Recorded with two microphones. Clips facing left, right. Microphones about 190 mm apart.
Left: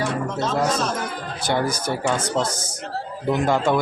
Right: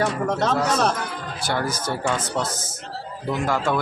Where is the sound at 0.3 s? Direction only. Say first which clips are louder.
Right 3 dB; 65° right (ahead or behind).